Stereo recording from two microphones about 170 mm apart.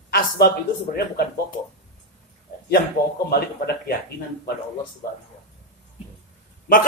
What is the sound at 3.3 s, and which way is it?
Speech, 65° left (ahead or behind).